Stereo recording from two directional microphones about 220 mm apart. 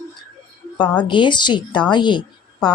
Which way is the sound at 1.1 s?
20° left (ahead or behind).